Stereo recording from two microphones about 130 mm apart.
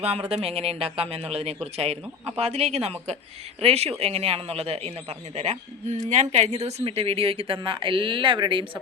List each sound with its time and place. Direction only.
0.0 s speech: 50° right (ahead or behind)